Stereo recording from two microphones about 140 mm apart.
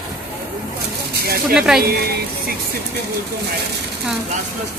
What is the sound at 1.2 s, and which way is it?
Speech, 90° right.